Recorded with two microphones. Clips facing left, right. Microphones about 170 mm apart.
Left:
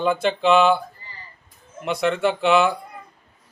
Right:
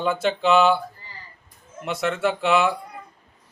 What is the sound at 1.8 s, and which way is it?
Speech, centre (ahead or behind).